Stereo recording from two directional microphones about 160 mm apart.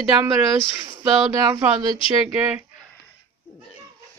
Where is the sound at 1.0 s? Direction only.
20° right (ahead or behind).